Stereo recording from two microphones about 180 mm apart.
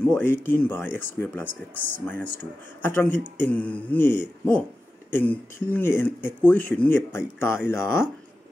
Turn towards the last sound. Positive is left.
turn(degrees=15)  # may be behind; listen again after turning